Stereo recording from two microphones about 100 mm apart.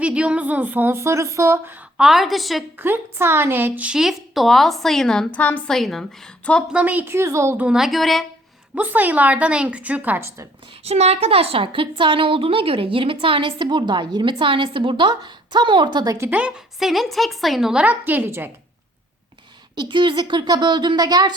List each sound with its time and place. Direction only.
0.0 s a woman's voice: 10° right (ahead or behind)
2.0 s a woman's voice: 5° right (ahead or behind)
2.7 s a woman's voice: 20° right (ahead or behind); by 5.7 s 15° left (ahead or behind)
5.7 s a woman's voice: 5° left (ahead or behind)
6.7 s a woman's voice: 15° right (ahead or behind)
7.5 s a woman's voice: 10° right (ahead or behind)
8.7 s a woman's voice: 15° right (ahead or behind)
10.8 s a woman's voice: 90° right; by 16.1 s 50° right (ahead or behind)
16.8 s a woman's voice: centre (ahead or behind); by 18.5 s 20° right (ahead or behind)
19.7 s speech: 50° right (ahead or behind)